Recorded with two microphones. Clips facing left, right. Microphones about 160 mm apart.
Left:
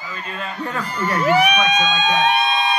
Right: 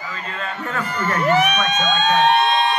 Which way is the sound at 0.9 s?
10° left (ahead or behind).